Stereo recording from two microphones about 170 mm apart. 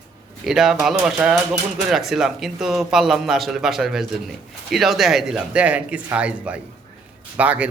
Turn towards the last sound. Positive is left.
turn(degrees=-10)  # may be behind; listen again after turning